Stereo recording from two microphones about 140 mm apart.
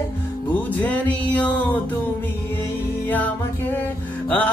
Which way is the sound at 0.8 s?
10° left (ahead or behind).